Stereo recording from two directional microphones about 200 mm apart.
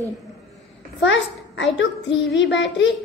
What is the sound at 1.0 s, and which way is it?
A child's voice, 60° left (ahead or behind).